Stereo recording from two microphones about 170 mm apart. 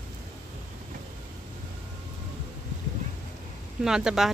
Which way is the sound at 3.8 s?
5° right (ahead or behind).